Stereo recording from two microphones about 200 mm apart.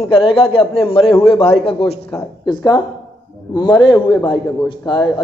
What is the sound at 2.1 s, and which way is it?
Speech, 10° left (ahead or behind).